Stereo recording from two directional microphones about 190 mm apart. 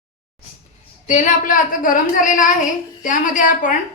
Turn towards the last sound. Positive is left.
turn(degrees=45)  # may be behind; listen again after turning